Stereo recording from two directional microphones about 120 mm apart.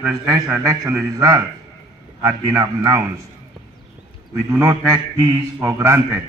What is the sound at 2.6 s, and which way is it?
Speech, 25° right (ahead or behind).